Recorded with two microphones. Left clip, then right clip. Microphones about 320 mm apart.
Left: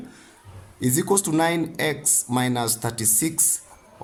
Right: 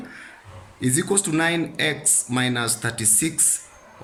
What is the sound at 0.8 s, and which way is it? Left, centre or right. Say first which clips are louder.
Speech: left 1 dB; centre.